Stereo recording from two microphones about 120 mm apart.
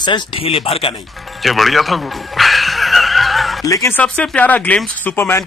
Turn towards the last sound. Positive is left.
turn(degrees=20)  # may be behind; listen again after turning